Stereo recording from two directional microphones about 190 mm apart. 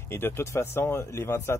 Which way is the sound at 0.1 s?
10° left (ahead or behind).